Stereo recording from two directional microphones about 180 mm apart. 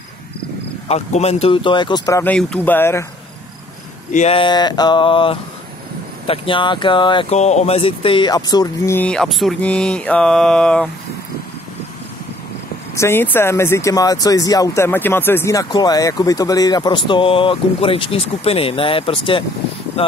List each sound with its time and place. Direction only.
0.8 s speech: 35° left (ahead or behind)
2.2 s speech: 5° left (ahead or behind)
4.1 s speech: 40° left (ahead or behind)
4.4 s speech: 25° left (ahead or behind); by 10.9 s 5° left (ahead or behind)
12.9 s speech: 15° left (ahead or behind); by 19.4 s 30° left (ahead or behind)